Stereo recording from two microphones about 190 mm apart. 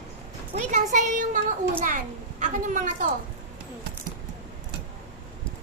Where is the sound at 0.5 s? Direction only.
40° right (ahead or behind).